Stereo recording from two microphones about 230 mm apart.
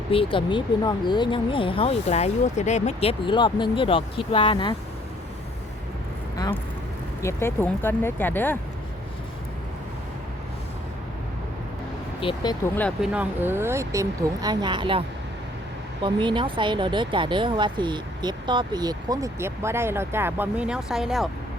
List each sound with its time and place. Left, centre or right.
0.1 s speech: left
6.3 s vehicle: centre
7.2 s speech: centre
12.2 s speech: centre
12.8 s speech: centre; by 15.0 s right
16.0 s speech: right; by 21.2 s centre